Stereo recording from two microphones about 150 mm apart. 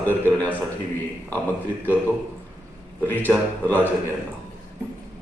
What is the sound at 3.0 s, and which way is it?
Speech, 10° left (ahead or behind).